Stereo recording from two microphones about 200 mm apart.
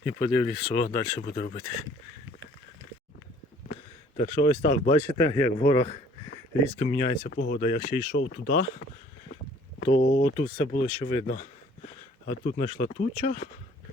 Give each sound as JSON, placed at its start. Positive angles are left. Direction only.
{"t": 0.0, "sound": "speech", "side_deg": 10}
{"t": 0.8, "sound": "speech", "side_deg": 30}
{"t": 4.2, "sound": "speech", "side_deg": 30}
{"t": 4.9, "sound": "speech", "side_deg": 10}
{"t": 7.3, "sound": "speech", "side_deg": 55}
{"t": 7.6, "sound": "speech", "side_deg": 35}
{"t": 8.1, "sound": "speech", "side_deg": 55}
{"t": 9.8, "sound": "speech", "side_deg": 40}
{"t": 10.3, "sound": "speech", "side_deg": 30}
{"t": 12.2, "sound": "speech", "side_deg": 45}